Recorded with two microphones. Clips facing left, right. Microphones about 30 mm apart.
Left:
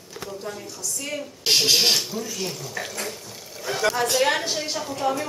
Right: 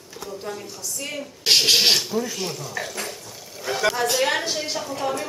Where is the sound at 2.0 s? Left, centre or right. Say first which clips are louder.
Right 3 dB; centre.